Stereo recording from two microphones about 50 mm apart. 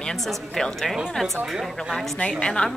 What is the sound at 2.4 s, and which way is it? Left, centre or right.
Speech, centre.